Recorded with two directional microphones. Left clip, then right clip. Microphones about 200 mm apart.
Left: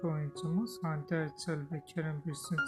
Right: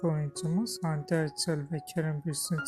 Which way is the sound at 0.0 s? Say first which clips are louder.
Right 5 dB; 25° right (ahead or behind).